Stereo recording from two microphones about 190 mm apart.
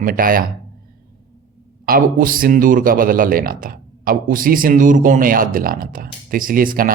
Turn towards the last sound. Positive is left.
turn(degrees=-45)  # may be behind; listen again after turning